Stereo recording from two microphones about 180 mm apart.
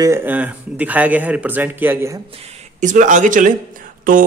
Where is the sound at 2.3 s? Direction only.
40° right (ahead or behind).